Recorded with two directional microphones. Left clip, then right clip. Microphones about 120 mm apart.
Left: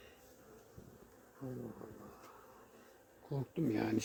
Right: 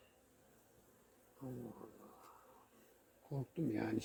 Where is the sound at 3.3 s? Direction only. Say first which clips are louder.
Left 4 dB; 50° left (ahead or behind).